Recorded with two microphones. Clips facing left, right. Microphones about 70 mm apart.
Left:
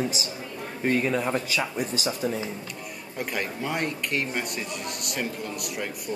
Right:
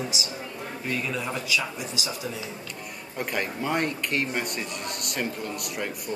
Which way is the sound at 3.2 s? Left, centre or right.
Centre.